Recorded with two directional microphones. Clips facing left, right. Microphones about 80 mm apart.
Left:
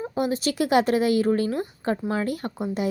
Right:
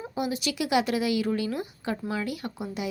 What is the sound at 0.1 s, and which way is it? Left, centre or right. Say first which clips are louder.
A woman's voice: left 4 dB; left.